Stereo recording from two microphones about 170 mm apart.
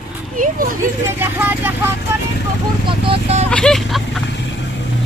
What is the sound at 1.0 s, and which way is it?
Speech, 10° right (ahead or behind).